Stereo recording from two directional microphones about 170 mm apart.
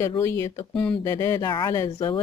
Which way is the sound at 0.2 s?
15° left (ahead or behind).